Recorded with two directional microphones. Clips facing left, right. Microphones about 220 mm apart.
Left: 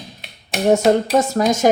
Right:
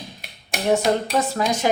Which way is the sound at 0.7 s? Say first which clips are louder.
Left 5 dB; 45° left (ahead or behind).